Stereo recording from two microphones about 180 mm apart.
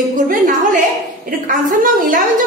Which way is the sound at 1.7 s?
50° right (ahead or behind).